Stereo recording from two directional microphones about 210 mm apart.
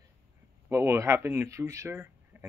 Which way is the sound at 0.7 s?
10° right (ahead or behind).